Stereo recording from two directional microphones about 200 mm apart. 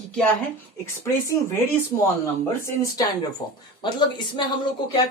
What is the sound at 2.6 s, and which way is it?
Speech, 15° left (ahead or behind).